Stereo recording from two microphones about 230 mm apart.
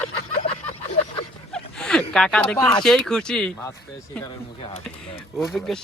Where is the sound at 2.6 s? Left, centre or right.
Centre.